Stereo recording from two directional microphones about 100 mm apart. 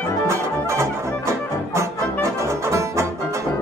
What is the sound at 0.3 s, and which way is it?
Music, 30° right (ahead or behind).